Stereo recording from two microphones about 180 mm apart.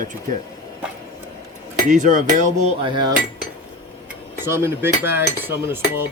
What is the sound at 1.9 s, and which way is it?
Speech, 45° right (ahead or behind).